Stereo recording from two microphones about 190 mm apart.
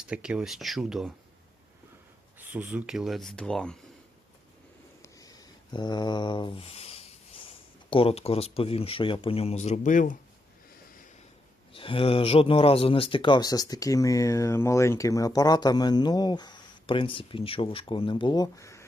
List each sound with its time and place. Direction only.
0.1 s speech: 5° right (ahead or behind)
2.4 s speech: 10° right (ahead or behind)
5.0 s a sound: 20° left (ahead or behind)
7.9 s speech: 30° left (ahead or behind)
11.7 s speech: 30° left (ahead or behind)